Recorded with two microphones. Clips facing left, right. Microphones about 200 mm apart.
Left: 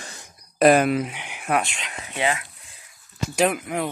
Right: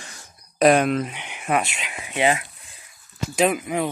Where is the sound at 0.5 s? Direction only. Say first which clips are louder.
Even; centre (ahead or behind); by 2.4 s 20° right (ahead or behind).